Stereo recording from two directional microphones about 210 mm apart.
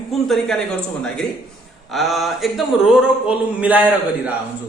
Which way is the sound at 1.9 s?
Centre (ahead or behind).